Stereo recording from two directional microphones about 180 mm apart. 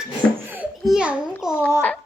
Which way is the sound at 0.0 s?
5° right (ahead or behind).